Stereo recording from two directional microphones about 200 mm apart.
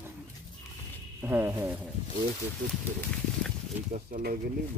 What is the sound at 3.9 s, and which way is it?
Speech, 40° right (ahead or behind).